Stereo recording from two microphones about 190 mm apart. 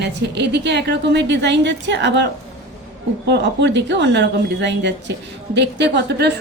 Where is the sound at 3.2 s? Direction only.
65° right (ahead or behind).